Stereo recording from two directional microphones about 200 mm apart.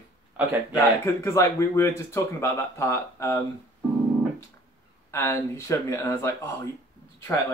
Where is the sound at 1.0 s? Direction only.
15° left (ahead or behind).